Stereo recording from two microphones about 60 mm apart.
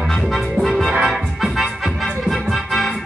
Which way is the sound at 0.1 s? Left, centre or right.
Centre.